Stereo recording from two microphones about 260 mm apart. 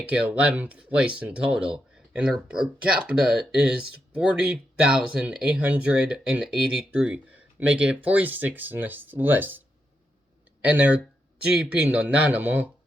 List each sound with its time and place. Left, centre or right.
0.1 s speech: centre